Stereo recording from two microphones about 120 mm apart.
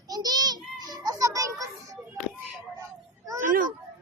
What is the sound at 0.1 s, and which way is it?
Music, 35° right (ahead or behind).